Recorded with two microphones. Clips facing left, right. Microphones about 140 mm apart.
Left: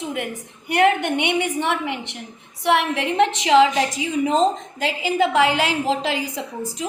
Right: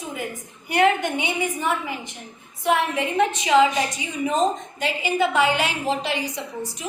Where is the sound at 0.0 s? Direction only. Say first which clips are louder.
Left 4 dB; 75° left (ahead or behind).